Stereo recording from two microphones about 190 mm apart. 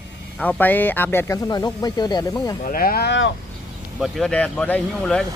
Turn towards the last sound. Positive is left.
turn(degrees=5)  # may be behind; listen again after turning